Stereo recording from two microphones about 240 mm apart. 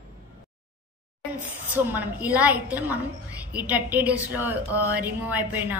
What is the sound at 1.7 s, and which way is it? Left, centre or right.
A woman's voice, centre.